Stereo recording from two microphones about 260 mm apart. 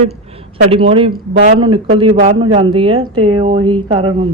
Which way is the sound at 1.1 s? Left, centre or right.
Right.